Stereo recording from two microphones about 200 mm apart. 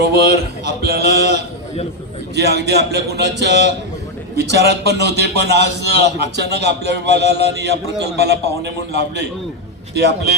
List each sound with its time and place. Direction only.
0.0 s a man's voice: 55° right (ahead or behind)